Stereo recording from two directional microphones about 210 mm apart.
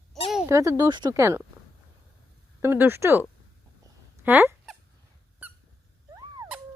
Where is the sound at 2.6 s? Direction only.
10° right (ahead or behind).